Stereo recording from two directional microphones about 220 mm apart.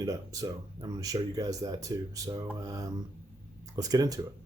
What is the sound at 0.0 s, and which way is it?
Speech, 15° right (ahead or behind).